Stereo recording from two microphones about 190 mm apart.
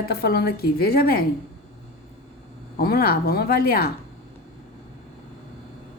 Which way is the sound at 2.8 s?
50° left (ahead or behind).